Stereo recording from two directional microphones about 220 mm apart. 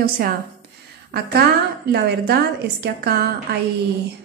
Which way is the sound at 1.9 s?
45° right (ahead or behind).